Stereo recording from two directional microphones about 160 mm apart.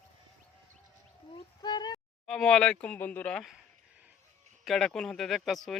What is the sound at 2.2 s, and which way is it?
Speech, 5° left (ahead or behind).